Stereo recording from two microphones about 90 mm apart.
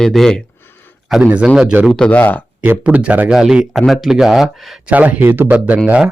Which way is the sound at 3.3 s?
5° right (ahead or behind).